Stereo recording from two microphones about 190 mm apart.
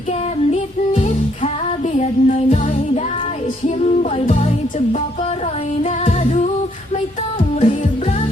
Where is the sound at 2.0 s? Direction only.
35° left (ahead or behind).